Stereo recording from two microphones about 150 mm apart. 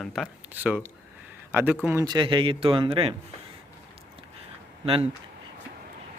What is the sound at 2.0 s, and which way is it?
A man's voice, 30° right (ahead or behind).